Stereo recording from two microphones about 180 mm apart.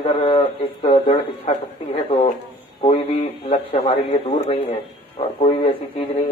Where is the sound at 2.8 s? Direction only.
35° left (ahead or behind).